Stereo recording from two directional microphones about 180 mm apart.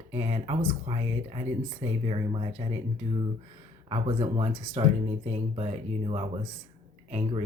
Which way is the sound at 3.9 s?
30° right (ahead or behind).